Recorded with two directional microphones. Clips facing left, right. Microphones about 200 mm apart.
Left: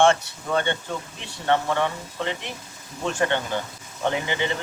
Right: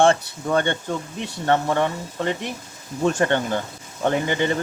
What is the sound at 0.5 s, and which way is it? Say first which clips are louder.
Speech: right 3 dB; 50° right (ahead or behind).